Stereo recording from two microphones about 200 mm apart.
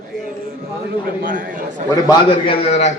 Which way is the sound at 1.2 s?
45° right (ahead or behind).